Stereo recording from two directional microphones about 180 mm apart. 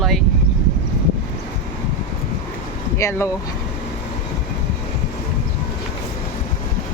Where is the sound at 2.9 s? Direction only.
15° left (ahead or behind).